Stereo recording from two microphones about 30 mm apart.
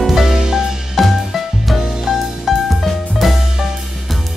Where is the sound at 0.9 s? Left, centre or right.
Centre.